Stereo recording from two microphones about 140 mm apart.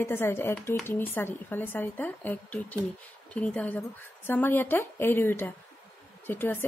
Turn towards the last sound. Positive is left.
turn(degrees=15)  # may be behind; listen again after turning